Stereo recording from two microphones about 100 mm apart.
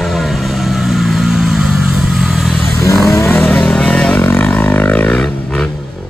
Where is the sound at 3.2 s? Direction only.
20° left (ahead or behind).